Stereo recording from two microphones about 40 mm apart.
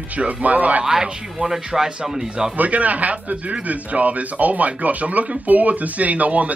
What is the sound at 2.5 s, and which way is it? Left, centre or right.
Speech, right.